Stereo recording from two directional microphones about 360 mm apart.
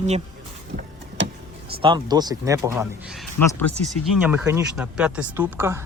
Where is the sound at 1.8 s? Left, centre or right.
Centre.